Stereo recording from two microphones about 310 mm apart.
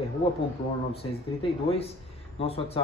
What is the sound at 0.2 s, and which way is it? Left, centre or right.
Speech, centre.